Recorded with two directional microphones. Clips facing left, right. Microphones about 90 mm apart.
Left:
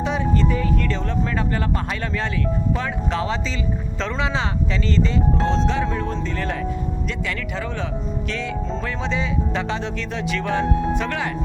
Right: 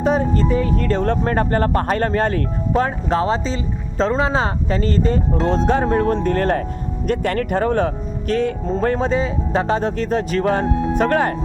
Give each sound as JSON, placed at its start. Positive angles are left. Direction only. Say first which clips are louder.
{"t": 0.0, "sound": "speech", "louder": "right 4 dB", "side_deg": -45}